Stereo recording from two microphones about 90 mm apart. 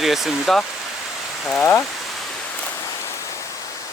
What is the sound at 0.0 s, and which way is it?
Speech, 5° right (ahead or behind).